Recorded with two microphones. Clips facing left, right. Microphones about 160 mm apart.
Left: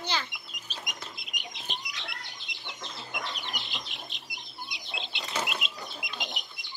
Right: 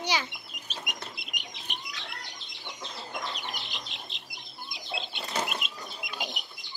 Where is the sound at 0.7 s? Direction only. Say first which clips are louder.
Right 2 dB; 70° right (ahead or behind).